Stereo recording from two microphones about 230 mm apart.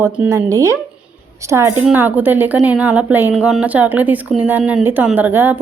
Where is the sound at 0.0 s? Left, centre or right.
Centre.